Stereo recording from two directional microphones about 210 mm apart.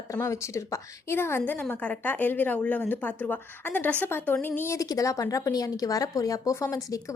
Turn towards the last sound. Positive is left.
turn(degrees=15)  # may be behind; listen again after turning